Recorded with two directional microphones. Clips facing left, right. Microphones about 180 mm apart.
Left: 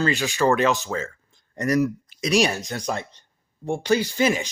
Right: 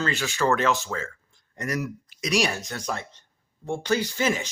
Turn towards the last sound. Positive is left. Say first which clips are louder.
# left 4 dB
turn(degrees=15)  # may be behind; listen again after turning